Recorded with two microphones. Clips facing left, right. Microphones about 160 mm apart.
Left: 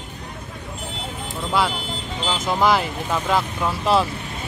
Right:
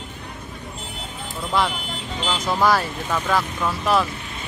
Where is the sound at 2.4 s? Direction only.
20° left (ahead or behind).